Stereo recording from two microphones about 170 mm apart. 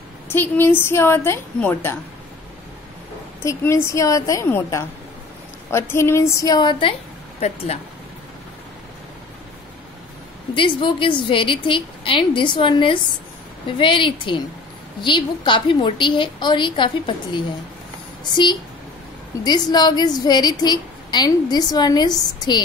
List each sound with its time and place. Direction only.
0.3 s a woman's voice: 15° left (ahead or behind)
3.4 s a woman's voice: 15° left (ahead or behind); by 7.8 s 40° left (ahead or behind)
10.5 s a woman's voice: 30° left (ahead or behind)